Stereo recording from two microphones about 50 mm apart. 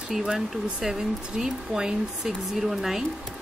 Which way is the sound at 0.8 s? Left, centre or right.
Centre.